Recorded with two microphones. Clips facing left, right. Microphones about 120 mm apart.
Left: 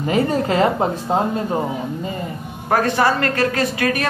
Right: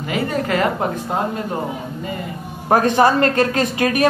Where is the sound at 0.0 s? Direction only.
35° left (ahead or behind).